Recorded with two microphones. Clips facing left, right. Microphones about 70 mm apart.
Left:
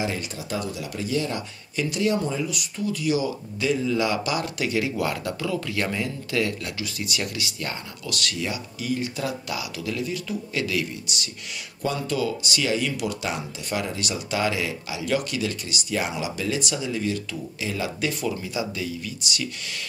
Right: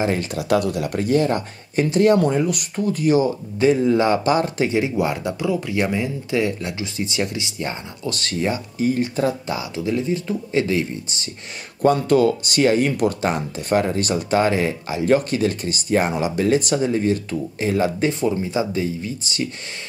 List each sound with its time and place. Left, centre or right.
0.0 s speech: right
0.3 s speech: right
11.8 s speech: right